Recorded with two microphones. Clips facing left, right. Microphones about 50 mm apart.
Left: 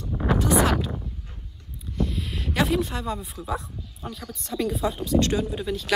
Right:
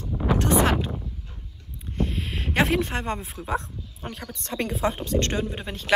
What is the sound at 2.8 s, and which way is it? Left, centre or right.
Speech, right.